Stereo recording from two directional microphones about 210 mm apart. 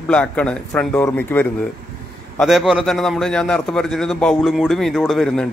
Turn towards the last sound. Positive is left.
turn(degrees=0)  # may be behind; listen again after turning